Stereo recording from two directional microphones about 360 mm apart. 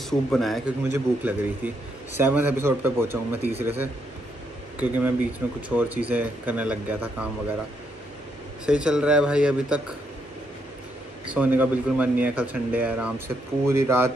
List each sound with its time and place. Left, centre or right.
0.3 s speech: centre
8.6 s speech: centre
11.3 s speech: centre